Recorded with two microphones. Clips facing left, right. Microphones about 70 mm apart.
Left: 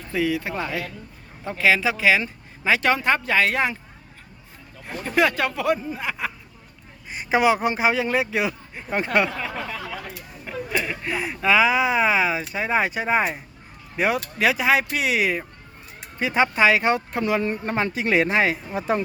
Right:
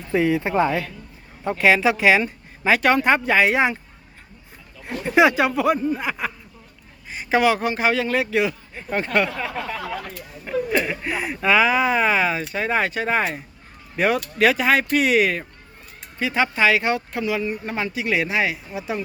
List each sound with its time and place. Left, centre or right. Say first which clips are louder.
0.1 s speech: right 4 dB; right
0.5 s speech: right 8 dB; centre
4.9 s speech: right 4 dB; centre
7.1 s a man's voice: right 1 dB; centre
9.4 s a sound: right 2 dB; centre
10.4 s speech: right 5 dB; centre
16.1 s speech: left 1 dB; left
17.2 s speech: left 2 dB; left